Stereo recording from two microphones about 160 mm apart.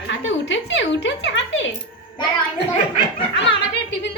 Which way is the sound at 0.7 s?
90° left.